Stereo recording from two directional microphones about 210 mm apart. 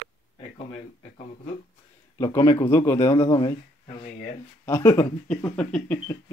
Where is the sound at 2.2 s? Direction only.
15° left (ahead or behind).